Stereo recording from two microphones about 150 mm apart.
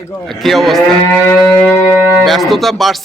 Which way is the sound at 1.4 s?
5° left (ahead or behind).